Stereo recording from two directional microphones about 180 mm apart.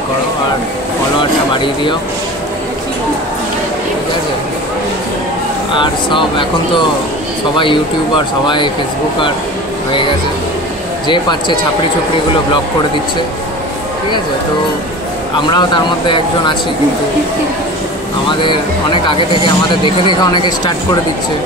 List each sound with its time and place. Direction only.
5.7 s speech: 25° left (ahead or behind)
7.5 s speech: 25° left (ahead or behind)
11.1 s speech: 25° left (ahead or behind)
15.5 s speech: 25° left (ahead or behind)
18.4 s speech: 25° left (ahead or behind)